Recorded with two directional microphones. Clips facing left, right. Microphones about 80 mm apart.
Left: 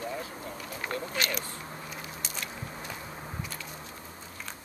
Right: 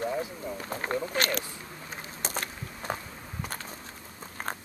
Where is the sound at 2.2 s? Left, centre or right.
Right.